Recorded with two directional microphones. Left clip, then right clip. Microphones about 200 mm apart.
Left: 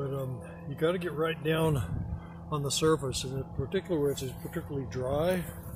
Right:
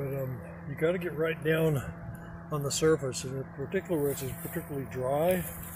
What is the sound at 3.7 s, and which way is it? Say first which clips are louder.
Speech: even; 15° left (ahead or behind).